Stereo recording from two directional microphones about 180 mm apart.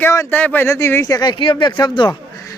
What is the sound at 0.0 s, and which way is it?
Speech, 15° left (ahead or behind).